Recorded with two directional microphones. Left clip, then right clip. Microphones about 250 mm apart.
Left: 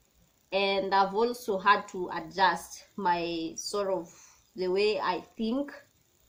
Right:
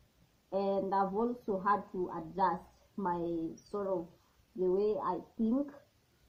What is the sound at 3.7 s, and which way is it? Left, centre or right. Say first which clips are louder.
A woman's voice: left 5 dB; left.